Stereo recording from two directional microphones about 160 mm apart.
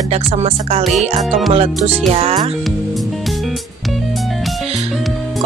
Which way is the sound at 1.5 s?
40° right (ahead or behind).